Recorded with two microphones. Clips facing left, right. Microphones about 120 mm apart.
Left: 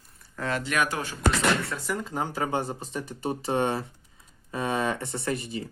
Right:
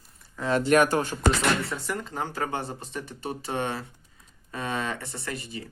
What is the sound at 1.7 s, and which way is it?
Speech, 5° left (ahead or behind).